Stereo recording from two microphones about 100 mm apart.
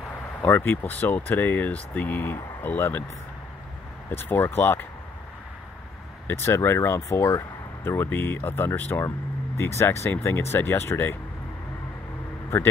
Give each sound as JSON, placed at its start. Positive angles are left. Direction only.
{"t": 0.4, "sound": "speech", "side_deg": 20}
{"t": 4.1, "sound": "speech", "side_deg": 25}
{"t": 6.2, "sound": "speech", "side_deg": 25}